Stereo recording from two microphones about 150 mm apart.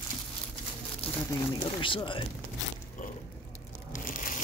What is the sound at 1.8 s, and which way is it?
Speech, 35° left (ahead or behind).